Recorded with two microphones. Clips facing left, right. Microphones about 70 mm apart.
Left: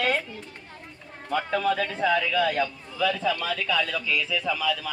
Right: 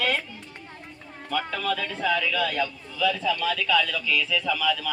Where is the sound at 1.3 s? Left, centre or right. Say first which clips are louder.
Left 3 dB; left.